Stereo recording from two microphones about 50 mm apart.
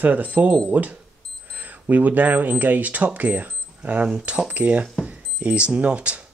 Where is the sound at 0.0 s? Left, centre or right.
Right.